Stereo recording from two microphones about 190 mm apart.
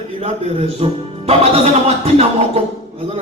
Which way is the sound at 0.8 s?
30° right (ahead or behind).